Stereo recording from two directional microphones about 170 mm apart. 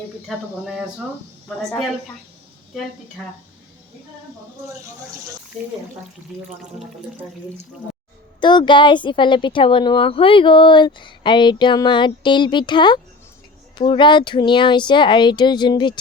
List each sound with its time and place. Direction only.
0.3 s speech: centre (ahead or behind)
1.5 s speech: 5° left (ahead or behind)
6.6 s speech: 5° right (ahead or behind)
8.4 s speech: 25° left (ahead or behind)